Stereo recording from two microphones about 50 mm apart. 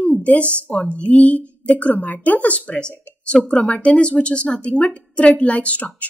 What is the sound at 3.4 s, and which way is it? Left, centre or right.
A woman's voice, centre.